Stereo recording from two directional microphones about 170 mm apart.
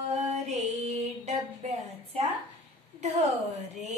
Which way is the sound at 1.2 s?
40° right (ahead or behind).